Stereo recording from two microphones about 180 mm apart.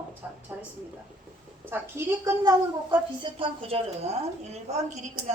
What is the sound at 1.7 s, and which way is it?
Speech, 15° right (ahead or behind).